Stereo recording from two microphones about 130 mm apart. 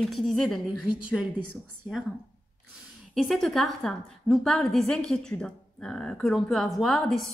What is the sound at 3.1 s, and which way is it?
A woman's voice, centre (ahead or behind).